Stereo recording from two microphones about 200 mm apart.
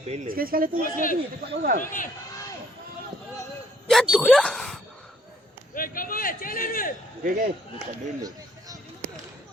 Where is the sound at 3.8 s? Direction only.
Centre (ahead or behind).